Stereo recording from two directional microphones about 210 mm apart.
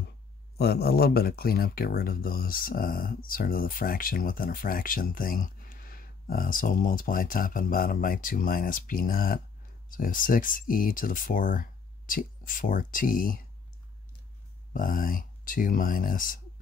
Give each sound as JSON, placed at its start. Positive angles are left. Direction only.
{"t": 0.6, "sound": "speech", "side_deg": 50}
{"t": 14.7, "sound": "speech", "side_deg": 40}